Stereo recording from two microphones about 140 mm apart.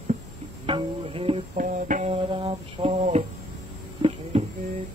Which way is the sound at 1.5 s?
70° right (ahead or behind).